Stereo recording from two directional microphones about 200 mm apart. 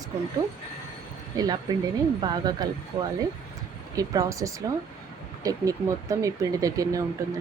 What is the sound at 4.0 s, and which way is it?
Speech, 15° right (ahead or behind).